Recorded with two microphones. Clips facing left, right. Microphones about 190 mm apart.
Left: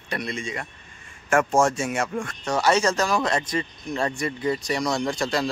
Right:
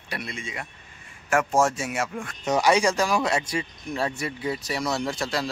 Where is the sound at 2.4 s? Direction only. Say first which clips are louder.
Right 1 dB; 15° right (ahead or behind).